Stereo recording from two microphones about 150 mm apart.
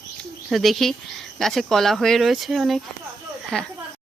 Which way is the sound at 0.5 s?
Centre (ahead or behind).